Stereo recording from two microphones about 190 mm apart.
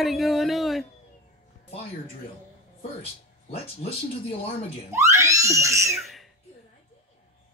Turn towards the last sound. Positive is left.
turn(degrees=0)  # may be behind; listen again after turning